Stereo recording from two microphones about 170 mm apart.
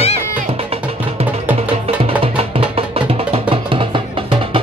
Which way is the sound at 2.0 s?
35° right (ahead or behind).